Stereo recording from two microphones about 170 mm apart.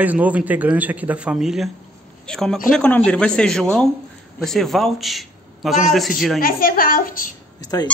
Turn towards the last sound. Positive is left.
turn(degrees=20)  # may be behind; listen again after turning